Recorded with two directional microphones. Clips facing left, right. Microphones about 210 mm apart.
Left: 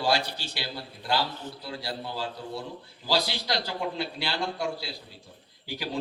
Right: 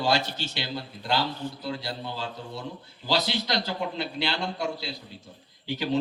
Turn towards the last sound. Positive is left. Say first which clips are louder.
# right 7 dB
turn(degrees=-25)  # may be behind; listen again after turning